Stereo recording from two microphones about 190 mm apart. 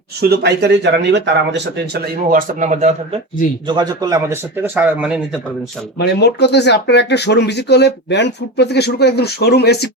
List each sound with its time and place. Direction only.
0.2 s speech: 60° right (ahead or behind)
2.3 s speech: 45° right (ahead or behind)
3.7 s a man's voice: 20° right (ahead or behind); by 5.2 s 5° right (ahead or behind)
6.0 s speech: 60° left (ahead or behind)